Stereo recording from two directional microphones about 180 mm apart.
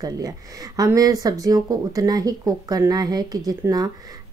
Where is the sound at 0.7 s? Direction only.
20° right (ahead or behind).